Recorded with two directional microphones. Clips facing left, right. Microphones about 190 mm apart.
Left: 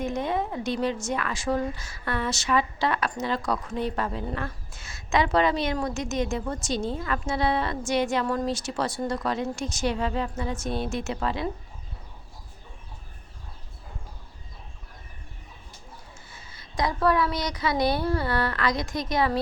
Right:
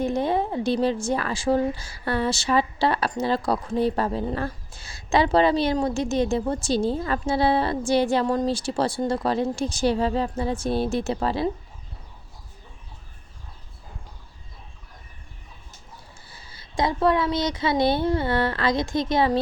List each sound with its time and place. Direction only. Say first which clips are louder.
0.0 s speech: right 4 dB; 30° right (ahead or behind)
16.3 s a woman's voice: right 4 dB; 30° right (ahead or behind)